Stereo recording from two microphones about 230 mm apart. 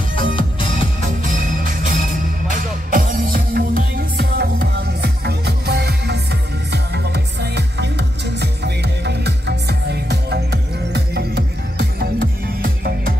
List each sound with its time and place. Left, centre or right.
0.1 s music: left
1.2 s music: right